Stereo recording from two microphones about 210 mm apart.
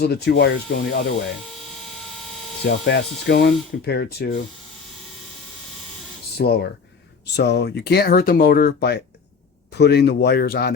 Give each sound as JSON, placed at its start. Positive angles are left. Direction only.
{"t": 0.0, "sound": "speech", "side_deg": 50}
{"t": 2.0, "sound": "vehicle", "side_deg": 0}
{"t": 2.8, "sound": "speech", "side_deg": 55}
{"t": 6.3, "sound": "speech", "side_deg": 50}